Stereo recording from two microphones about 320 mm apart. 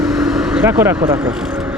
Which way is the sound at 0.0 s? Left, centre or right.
Centre.